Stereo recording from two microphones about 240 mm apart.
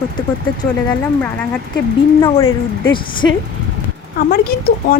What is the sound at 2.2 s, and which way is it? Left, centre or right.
Speech, centre.